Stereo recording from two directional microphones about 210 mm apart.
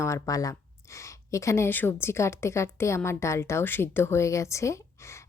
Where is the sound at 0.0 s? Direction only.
15° left (ahead or behind).